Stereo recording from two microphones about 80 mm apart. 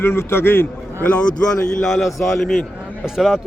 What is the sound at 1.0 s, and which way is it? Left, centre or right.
A man's voice, centre.